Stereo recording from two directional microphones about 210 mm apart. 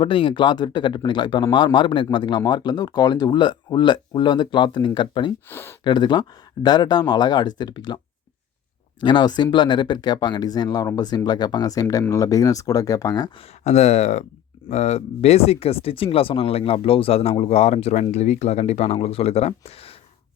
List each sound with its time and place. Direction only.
0.0 s speech: 25° left (ahead or behind)
5.5 s speech: 10° left (ahead or behind)
5.8 s speech: 20° left (ahead or behind)
13.7 s speech: 30° left (ahead or behind)